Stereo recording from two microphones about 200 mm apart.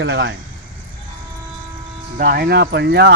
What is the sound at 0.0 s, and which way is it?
Speech, 60° right (ahead or behind).